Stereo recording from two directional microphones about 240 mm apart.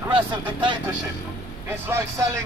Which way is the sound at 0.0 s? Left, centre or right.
Centre.